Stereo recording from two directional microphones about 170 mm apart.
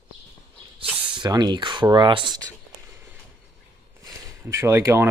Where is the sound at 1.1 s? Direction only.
25° right (ahead or behind).